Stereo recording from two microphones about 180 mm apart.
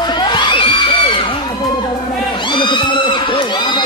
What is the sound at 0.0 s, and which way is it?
Crowd, 25° left (ahead or behind).